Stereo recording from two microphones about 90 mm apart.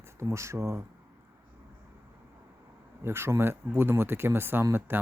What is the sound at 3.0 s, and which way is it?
Speech, 25° right (ahead or behind).